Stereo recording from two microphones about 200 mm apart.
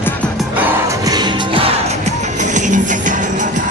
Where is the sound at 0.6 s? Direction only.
20° right (ahead or behind).